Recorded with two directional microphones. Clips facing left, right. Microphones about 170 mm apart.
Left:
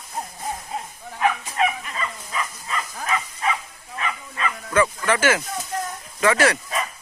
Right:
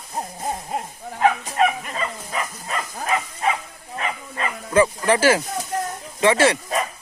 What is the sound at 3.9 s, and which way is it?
Bow-wow, 35° right (ahead or behind).